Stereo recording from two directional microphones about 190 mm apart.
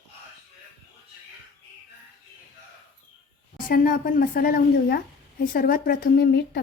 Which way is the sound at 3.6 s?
50° left (ahead or behind).